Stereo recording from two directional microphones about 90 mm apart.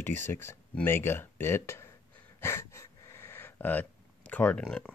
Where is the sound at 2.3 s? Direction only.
30° left (ahead or behind); by 4.9 s 10° left (ahead or behind).